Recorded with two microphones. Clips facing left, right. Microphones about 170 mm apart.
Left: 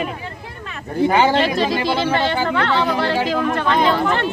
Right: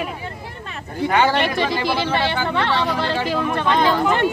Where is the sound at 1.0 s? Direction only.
20° left (ahead or behind).